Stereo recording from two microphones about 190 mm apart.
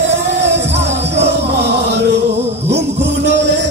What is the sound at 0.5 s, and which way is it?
Music, 35° right (ahead or behind).